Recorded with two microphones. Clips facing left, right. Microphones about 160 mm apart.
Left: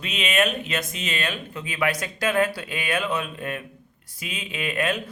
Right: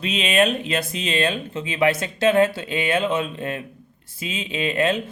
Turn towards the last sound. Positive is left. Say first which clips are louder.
# right 5 dB
turn(degrees=-25)  # may be behind; listen again after turning